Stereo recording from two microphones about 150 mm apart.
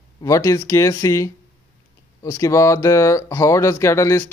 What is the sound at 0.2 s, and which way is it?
Speech, 20° left (ahead or behind).